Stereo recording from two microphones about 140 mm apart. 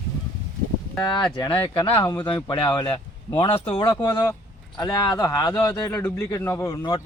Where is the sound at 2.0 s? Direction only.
30° left (ahead or behind).